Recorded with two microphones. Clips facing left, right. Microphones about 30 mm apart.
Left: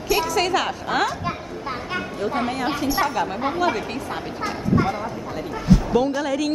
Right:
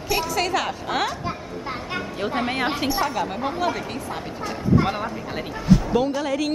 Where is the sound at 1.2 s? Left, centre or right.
Centre.